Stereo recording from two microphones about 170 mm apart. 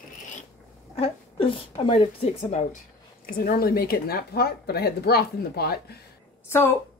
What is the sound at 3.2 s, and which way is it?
A woman's voice, 65° left (ahead or behind).